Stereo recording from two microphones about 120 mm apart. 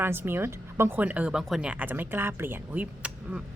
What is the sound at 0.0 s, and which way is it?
A woman's voice, 20° right (ahead or behind).